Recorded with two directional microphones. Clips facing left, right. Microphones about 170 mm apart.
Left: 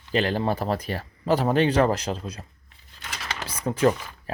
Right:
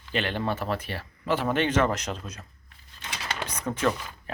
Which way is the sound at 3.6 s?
30° left (ahead or behind).